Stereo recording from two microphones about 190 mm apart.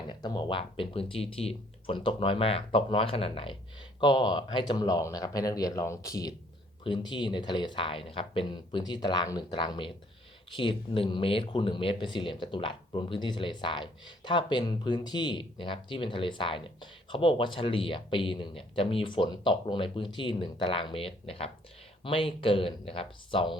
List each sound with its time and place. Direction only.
0.1 s speech: 25° left (ahead or behind)